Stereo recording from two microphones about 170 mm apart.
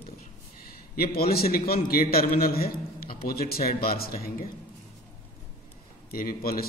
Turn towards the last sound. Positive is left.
turn(degrees=60)  # may be behind; listen again after turning